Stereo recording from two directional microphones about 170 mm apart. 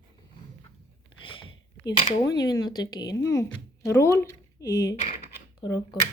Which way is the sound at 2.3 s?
20° left (ahead or behind).